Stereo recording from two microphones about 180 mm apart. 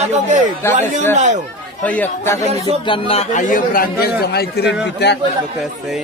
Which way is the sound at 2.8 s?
30° left (ahead or behind).